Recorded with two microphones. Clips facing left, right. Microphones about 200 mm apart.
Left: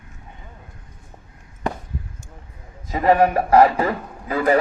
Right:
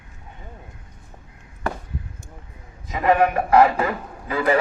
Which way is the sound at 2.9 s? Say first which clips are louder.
Left 2 dB; 35° left (ahead or behind).